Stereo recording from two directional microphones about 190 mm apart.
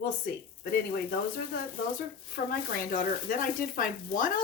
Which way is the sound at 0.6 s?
55° left (ahead or behind).